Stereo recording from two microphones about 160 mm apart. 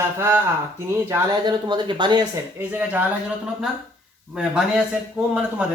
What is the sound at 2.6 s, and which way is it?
Speech, 10° right (ahead or behind).